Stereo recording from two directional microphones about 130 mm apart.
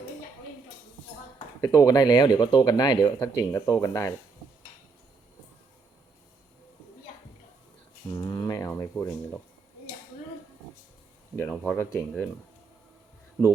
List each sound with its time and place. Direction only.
1.6 s speech: 25° left (ahead or behind)
8.1 s a sound: 25° left (ahead or behind)
11.3 s speech: 10° left (ahead or behind)